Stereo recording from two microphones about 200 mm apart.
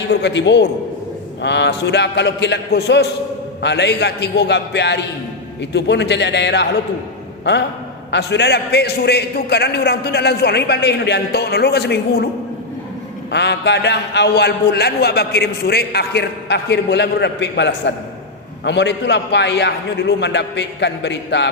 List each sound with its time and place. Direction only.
0.1 s a man's voice: 60° left (ahead or behind)
8.1 s a man's voice: 60° left (ahead or behind)
13.3 s a man's voice: 60° left (ahead or behind)